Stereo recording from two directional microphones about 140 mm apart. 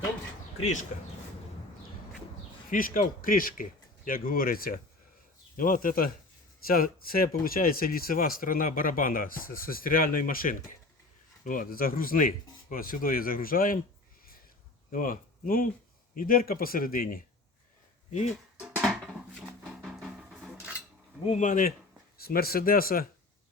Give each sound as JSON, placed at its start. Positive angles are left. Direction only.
{"t": 2.6, "sound": "speech", "side_deg": 80}
{"t": 14.9, "sound": "speech", "side_deg": 80}
{"t": 18.6, "sound": "music", "side_deg": 0}
{"t": 21.2, "sound": "speech", "side_deg": 60}
{"t": 22.2, "sound": "speech", "side_deg": 90}